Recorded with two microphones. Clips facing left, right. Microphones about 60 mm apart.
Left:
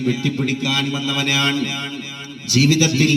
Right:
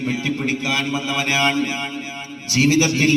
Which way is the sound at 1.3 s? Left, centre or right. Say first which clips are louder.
Right 4 dB; right.